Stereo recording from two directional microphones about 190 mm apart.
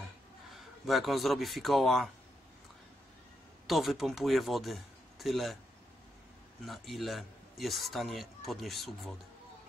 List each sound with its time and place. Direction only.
0.8 s a man's voice: centre (ahead or behind)
3.6 s a man's voice: centre (ahead or behind)
6.6 s a man's voice: centre (ahead or behind)